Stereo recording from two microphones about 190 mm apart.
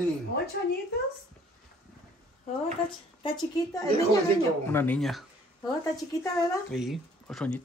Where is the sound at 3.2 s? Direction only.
20° left (ahead or behind).